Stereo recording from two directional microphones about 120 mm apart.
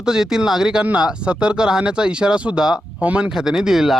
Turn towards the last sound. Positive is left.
turn(degrees=-5)  # may be behind; listen again after turning